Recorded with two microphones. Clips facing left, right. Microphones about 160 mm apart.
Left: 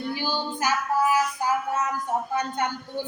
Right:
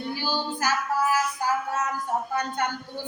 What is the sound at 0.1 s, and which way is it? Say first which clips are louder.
Child singing: right 1 dB; 15° left (ahead or behind).